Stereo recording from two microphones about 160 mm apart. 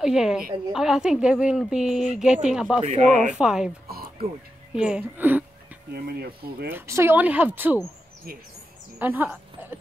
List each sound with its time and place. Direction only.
0.0 s a woman's voice: 5° right (ahead or behind)
2.9 s speech: 50° right (ahead or behind)
3.3 s a woman's voice: 5° right (ahead or behind)
4.7 s speech: 5° right (ahead or behind)
6.0 s speech: 75° right (ahead or behind)
6.7 s speech: 15° right (ahead or behind)
9.0 s speech: 10° right (ahead or behind)